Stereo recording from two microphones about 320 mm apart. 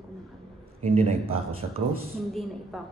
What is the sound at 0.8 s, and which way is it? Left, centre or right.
Speech, centre.